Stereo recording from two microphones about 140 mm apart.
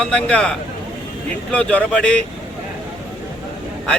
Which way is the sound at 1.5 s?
10° left (ahead or behind).